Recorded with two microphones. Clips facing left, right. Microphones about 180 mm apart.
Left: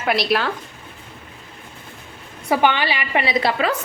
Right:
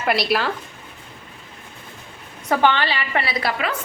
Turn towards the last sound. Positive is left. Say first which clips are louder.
# left 4 dB
turn(degrees=30)  # may be behind; listen again after turning